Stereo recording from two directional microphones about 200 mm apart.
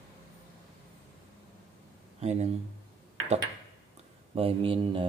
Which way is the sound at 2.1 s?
35° right (ahead or behind).